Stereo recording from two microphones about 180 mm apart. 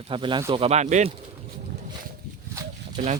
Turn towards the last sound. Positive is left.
turn(degrees=-45)  # may be behind; listen again after turning